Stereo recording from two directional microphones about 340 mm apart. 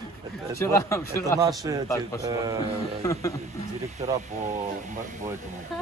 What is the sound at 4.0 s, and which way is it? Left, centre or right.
Speech, centre.